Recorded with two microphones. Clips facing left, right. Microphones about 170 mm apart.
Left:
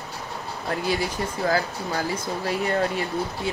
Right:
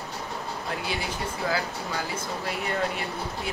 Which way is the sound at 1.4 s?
45° left (ahead or behind).